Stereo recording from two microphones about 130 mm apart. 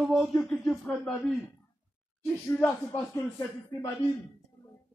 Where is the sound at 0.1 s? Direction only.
5° left (ahead or behind).